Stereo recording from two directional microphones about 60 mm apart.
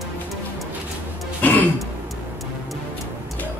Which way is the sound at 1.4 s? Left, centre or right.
Left.